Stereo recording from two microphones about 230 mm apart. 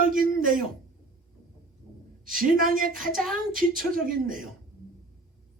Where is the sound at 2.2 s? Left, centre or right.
Right.